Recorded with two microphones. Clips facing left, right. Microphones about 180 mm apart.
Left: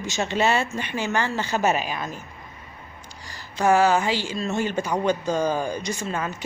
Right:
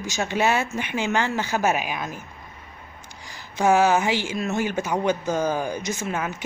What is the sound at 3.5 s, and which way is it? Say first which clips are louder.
Speech: even; 10° right (ahead or behind).